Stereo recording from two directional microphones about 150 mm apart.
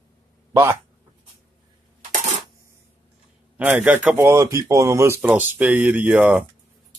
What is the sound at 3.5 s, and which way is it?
Speech, 10° right (ahead or behind).